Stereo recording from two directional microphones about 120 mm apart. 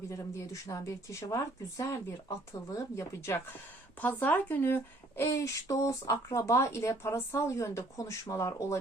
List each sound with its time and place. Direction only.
0.1 s speech: 25° left (ahead or behind)